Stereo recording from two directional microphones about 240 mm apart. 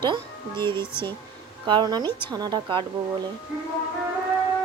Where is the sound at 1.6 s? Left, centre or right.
Centre.